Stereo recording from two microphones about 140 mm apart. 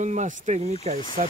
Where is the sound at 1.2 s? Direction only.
70° right (ahead or behind).